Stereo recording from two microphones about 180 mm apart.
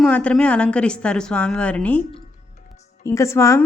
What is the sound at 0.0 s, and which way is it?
A woman's voice, 5° left (ahead or behind).